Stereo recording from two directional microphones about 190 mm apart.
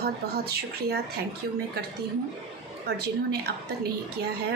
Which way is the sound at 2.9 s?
55° right (ahead or behind).